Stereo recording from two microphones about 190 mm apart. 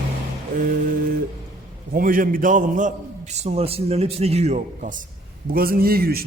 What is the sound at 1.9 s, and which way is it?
A man's voice, 45° right (ahead or behind).